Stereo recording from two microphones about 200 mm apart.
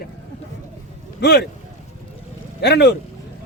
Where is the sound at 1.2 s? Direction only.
55° left (ahead or behind).